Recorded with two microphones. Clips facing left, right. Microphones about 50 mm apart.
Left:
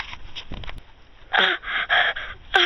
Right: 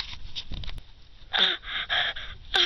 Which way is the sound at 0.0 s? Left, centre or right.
Left.